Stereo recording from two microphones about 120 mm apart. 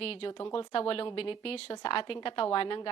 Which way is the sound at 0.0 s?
55° left (ahead or behind).